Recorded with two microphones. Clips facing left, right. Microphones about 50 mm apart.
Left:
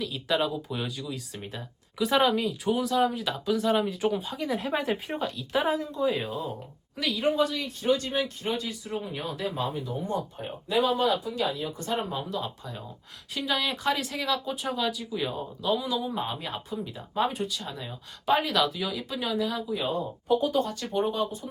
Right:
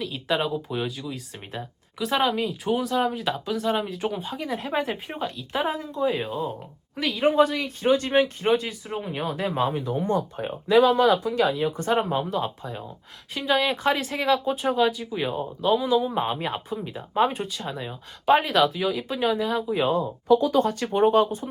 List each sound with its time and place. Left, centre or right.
0.0 s speech: centre
2.0 s speech: centre
7.2 s speech: right
8.9 s speech: right
9.6 s speech: right
11.8 s speech: right
12.3 s speech: right
13.3 s speech: centre
13.6 s speech: right
14.5 s speech: centre
14.8 s speech: centre
19.9 s speech: right
20.9 s speech: right